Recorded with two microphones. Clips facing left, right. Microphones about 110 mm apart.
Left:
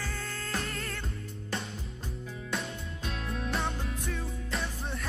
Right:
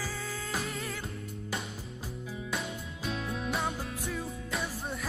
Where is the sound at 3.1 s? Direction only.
5° right (ahead or behind).